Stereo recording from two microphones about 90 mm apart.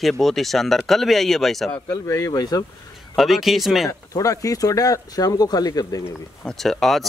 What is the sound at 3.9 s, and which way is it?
Speech, 40° left (ahead or behind).